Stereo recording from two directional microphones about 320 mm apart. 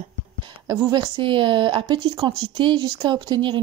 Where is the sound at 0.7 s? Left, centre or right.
Centre.